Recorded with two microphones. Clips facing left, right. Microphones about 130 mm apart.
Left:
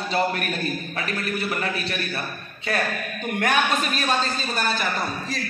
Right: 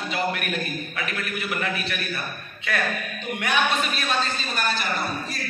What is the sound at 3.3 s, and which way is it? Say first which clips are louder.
Speech: left 2 dB; 45° left (ahead or behind).